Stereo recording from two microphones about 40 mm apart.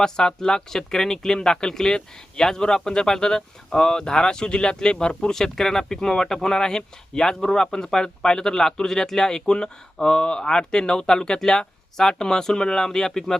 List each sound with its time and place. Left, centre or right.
0.0 s speech: centre
5.3 s speech: centre